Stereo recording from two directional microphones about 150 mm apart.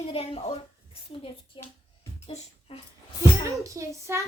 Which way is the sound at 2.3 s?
45° left (ahead or behind).